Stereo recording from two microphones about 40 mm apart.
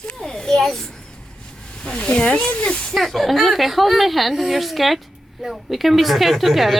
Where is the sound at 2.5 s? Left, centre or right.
Centre.